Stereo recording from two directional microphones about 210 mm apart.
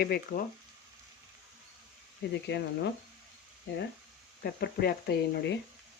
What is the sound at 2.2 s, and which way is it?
Speech, 50° left (ahead or behind).